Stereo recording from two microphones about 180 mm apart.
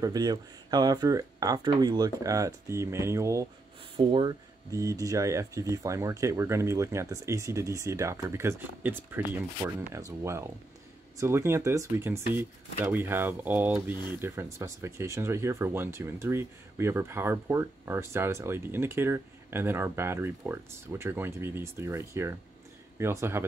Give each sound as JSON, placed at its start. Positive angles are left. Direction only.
{"t": 0.0, "sound": "speech", "side_deg": -20}
{"t": 3.9, "sound": "speech", "side_deg": -25}